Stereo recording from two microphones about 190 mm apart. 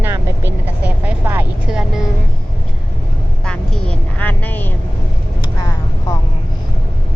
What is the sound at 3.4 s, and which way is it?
Vehicle, 5° left (ahead or behind).